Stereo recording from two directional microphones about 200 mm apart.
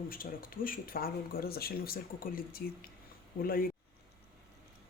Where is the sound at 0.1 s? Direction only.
45° left (ahead or behind).